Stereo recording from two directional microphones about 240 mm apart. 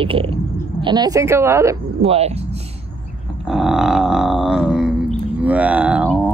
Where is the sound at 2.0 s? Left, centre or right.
Right.